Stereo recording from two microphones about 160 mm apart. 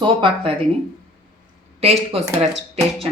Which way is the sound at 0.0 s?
30° right (ahead or behind).